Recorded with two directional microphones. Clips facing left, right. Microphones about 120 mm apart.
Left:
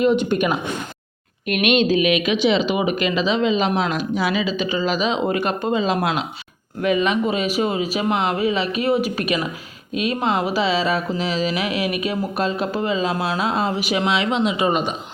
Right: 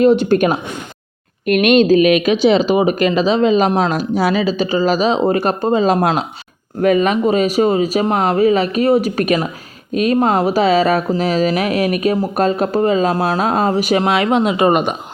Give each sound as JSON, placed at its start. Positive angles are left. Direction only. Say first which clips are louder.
{"t": 0.0, "sound": "speech", "louder": "right 6 dB", "side_deg": -35}